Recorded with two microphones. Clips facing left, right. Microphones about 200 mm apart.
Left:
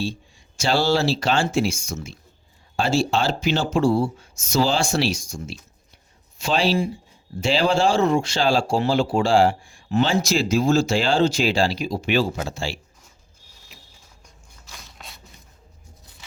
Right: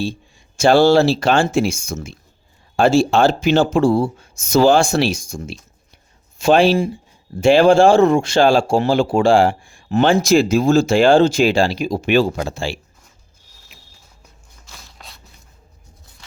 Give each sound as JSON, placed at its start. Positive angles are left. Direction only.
{"t": 0.0, "sound": "speech", "side_deg": -50}
{"t": 14.8, "sound": "zipper", "side_deg": 0}